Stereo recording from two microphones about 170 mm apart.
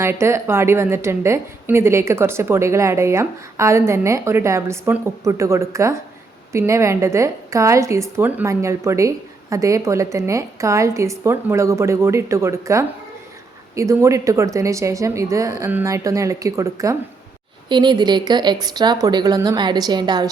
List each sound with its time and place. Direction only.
0.0 s a woman's voice: 15° right (ahead or behind)